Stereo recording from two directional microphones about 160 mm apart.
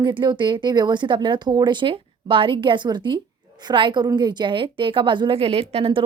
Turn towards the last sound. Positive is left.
turn(degrees=-35)  # may be behind; listen again after turning